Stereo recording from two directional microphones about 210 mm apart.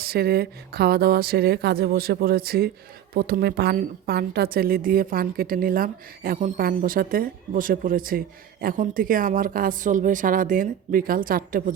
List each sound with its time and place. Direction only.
0.0 s a woman's voice: 45° right (ahead or behind)